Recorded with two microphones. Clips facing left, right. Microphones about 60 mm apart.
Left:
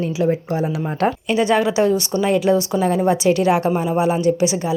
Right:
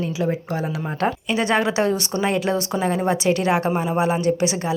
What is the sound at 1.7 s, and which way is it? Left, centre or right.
Speech, right.